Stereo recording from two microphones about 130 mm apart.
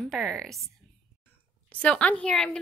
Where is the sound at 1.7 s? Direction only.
10° left (ahead or behind).